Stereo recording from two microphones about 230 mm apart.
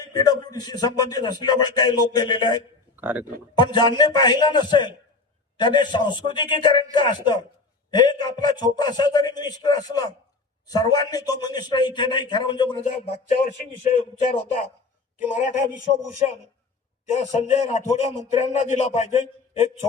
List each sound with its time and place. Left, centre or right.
0.1 s a man's voice: centre
2.9 s a man's voice: centre
3.6 s a man's voice: centre
13.4 s a man's voice: left
17.1 s a man's voice: left